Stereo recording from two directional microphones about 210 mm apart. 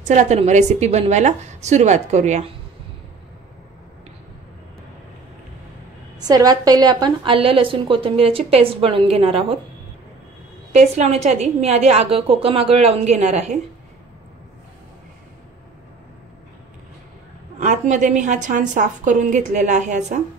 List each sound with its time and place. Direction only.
0.0 s a woman's voice: 35° right (ahead or behind)
6.1 s a woman's voice: 20° right (ahead or behind)
10.7 s a woman's voice: 35° right (ahead or behind)
17.6 s a woman's voice: 35° right (ahead or behind)